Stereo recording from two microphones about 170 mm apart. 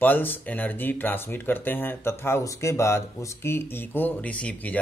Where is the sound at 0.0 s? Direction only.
10° left (ahead or behind).